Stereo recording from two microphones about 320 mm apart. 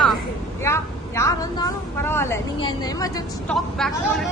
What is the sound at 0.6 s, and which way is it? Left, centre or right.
Vehicle, centre.